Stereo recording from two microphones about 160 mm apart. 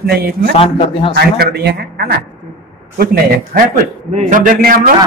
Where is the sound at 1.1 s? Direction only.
85° right.